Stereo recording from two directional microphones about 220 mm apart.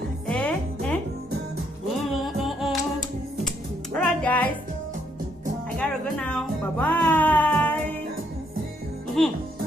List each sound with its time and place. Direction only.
0.3 s music: 5° left (ahead or behind)
2.2 s music: centre (ahead or behind)
3.9 s music: 5° left (ahead or behind)
5.7 s music: 5° left (ahead or behind)
9.2 s music: centre (ahead or behind)